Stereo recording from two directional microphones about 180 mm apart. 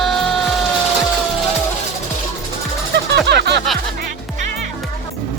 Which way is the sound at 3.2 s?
70° right (ahead or behind).